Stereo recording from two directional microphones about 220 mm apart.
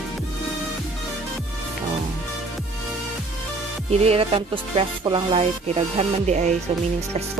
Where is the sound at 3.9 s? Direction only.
30° right (ahead or behind).